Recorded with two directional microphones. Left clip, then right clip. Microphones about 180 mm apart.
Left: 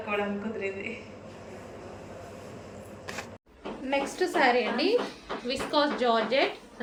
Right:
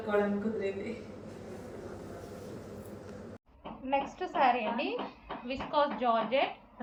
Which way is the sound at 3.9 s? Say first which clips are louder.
Left 4 dB; 35° left (ahead or behind).